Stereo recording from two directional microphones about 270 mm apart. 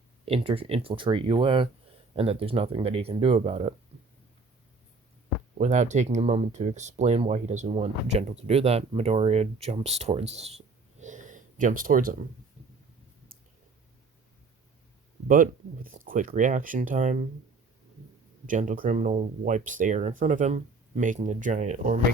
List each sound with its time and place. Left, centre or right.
0.3 s speech: right
5.5 s speech: right
11.0 s a sound: right
15.3 s speech: right
18.4 s speech: right